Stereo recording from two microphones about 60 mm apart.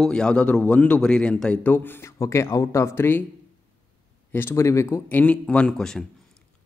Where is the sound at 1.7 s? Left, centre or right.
Left.